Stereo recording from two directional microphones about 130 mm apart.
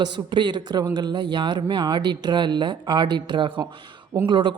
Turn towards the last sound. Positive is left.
turn(degrees=-35)  # may be behind; listen again after turning